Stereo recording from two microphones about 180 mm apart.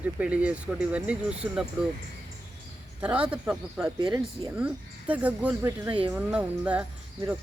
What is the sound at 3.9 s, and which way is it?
Speech, 25° right (ahead or behind).